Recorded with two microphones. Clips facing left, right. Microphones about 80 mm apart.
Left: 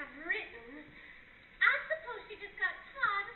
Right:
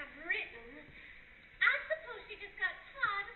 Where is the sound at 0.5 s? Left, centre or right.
Centre.